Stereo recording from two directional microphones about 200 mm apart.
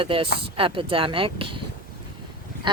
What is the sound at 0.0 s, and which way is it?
Speech, 25° right (ahead or behind).